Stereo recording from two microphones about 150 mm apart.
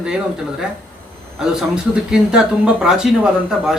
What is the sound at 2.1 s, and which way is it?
A man's voice, 5° right (ahead or behind).